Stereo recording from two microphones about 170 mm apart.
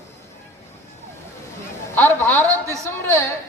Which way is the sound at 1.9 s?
10° left (ahead or behind).